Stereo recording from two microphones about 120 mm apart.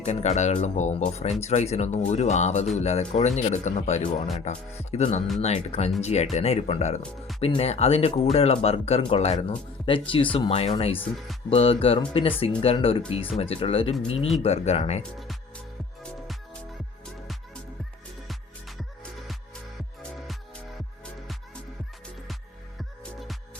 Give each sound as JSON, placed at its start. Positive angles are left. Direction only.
{"t": 0.0, "sound": "speech", "side_deg": 70}
{"t": 7.0, "sound": "speech", "side_deg": 0}
{"t": 7.4, "sound": "speech", "side_deg": 60}
{"t": 22.8, "sound": "music", "side_deg": 0}